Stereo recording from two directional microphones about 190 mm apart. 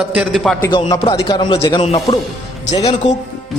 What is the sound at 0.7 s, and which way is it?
A man's voice, 25° left (ahead or behind).